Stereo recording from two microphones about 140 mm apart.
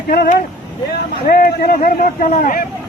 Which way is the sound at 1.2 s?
90° left.